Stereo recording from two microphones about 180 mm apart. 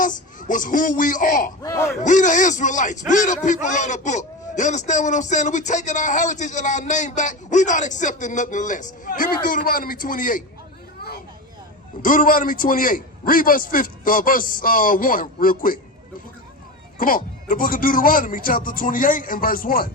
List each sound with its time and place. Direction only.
0.0 s a man's voice: 45° left (ahead or behind)
1.6 s speech: 15° left (ahead or behind)
2.0 s a man's voice: 45° left (ahead or behind)
12.0 s a man's voice: 50° left (ahead or behind)
17.0 s a man's voice: 50° left (ahead or behind)